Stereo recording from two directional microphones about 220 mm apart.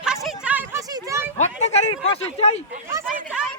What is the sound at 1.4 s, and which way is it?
Speech, 30° left (ahead or behind).